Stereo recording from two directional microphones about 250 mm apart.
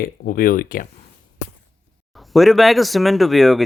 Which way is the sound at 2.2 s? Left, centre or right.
Centre.